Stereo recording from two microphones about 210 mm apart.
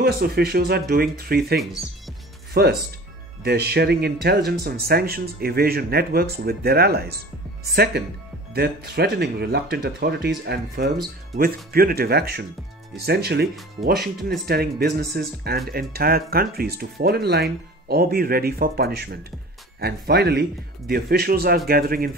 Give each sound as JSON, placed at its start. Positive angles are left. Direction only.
{"t": 0.0, "sound": "speech", "side_deg": -50}